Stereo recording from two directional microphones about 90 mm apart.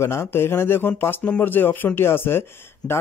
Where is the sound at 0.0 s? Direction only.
30° left (ahead or behind).